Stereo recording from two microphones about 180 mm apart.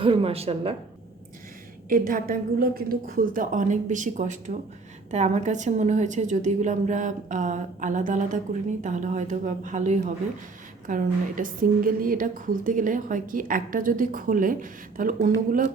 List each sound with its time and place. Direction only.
0.0 s a woman's voice: 30° right (ahead or behind)
1.9 s a woman's voice: 50° right (ahead or behind)